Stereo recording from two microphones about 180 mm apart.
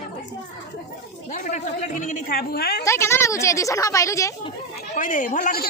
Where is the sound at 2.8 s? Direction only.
15° left (ahead or behind).